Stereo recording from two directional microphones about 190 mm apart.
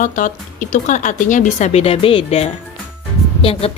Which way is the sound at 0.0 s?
45° left (ahead or behind).